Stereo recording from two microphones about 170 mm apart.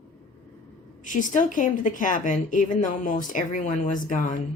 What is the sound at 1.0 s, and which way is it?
A woman's voice, 50° left (ahead or behind).